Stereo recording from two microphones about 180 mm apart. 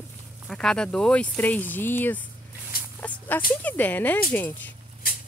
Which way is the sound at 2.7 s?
55° left (ahead or behind).